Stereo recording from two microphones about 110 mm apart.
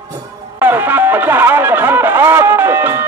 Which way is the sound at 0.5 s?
15° right (ahead or behind).